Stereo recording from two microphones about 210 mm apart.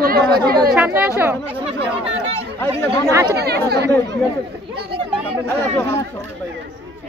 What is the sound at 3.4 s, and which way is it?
Speech, 50° right (ahead or behind).